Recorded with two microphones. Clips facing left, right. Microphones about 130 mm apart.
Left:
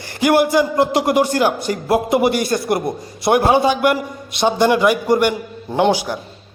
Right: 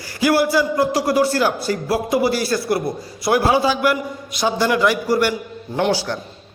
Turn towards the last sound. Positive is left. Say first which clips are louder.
# left 3 dB
turn(degrees=15)  # may be behind; listen again after turning